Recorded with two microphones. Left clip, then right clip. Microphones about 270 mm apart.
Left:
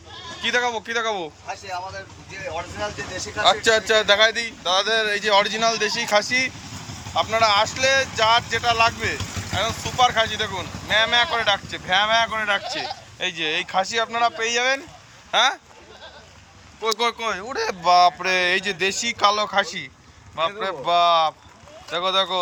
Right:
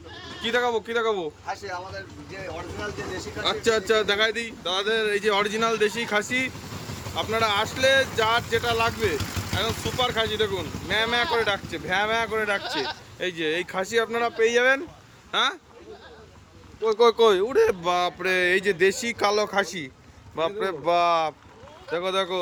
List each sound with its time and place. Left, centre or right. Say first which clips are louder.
0.4 s speech: left 2 dB; centre
3.4 s speech: left 6 dB; centre
17.0 s speech: right 6 dB; right